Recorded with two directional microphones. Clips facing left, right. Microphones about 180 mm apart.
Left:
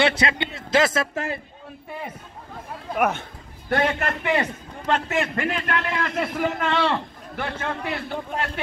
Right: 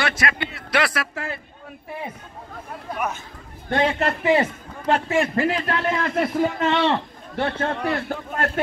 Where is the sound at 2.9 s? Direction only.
60° left (ahead or behind).